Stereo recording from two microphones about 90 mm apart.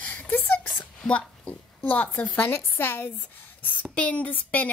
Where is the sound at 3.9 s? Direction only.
15° left (ahead or behind).